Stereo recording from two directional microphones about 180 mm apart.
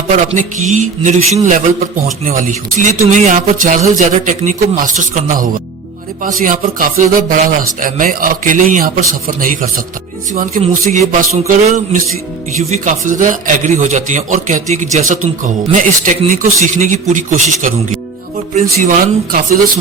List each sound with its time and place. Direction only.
0.3 s a man's voice: 40° right (ahead or behind)